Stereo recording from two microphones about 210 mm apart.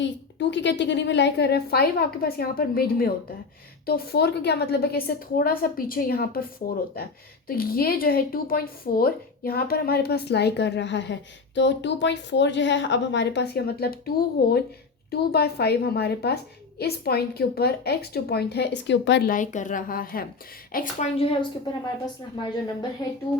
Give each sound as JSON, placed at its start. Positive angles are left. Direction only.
{"t": 0.0, "sound": "a woman's voice", "side_deg": 60}
{"t": 19.3, "sound": "a woman's voice", "side_deg": 35}
{"t": 20.7, "sound": "a woman's voice", "side_deg": 30}